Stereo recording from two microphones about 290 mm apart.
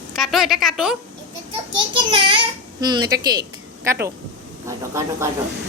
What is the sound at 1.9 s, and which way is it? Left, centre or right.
A child's voice, centre.